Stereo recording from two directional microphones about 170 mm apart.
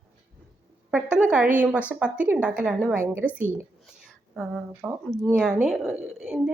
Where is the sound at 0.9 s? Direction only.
5° right (ahead or behind).